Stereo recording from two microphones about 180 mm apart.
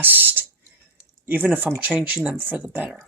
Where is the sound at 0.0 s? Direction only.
10° right (ahead or behind).